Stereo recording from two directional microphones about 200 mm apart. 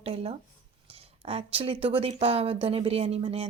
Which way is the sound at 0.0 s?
30° right (ahead or behind).